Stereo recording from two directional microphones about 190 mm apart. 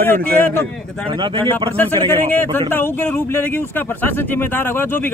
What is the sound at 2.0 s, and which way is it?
Speech, 10° left (ahead or behind).